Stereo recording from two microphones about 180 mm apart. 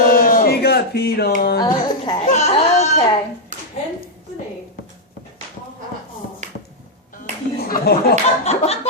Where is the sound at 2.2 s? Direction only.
40° left (ahead or behind).